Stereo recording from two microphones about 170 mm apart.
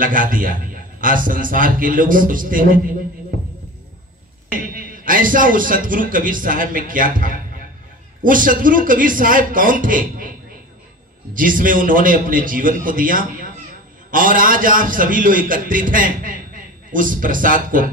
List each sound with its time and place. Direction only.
0.0 s a man's voice: 55° right (ahead or behind)
4.5 s a man's voice: 55° right (ahead or behind)
11.3 s a man's voice: 55° right (ahead or behind)